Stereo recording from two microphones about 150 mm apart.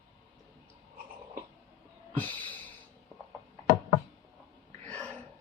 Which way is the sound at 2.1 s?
10° left (ahead or behind).